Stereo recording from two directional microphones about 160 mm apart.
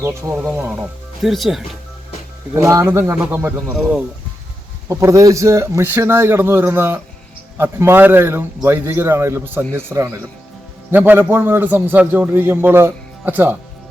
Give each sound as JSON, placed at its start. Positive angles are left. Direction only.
{"t": 0.0, "sound": "a man's voice", "side_deg": -15}
{"t": 2.6, "sound": "a man's voice", "side_deg": -20}
{"t": 3.7, "sound": "speech", "side_deg": -5}
{"t": 4.9, "sound": "a man's voice", "side_deg": -20}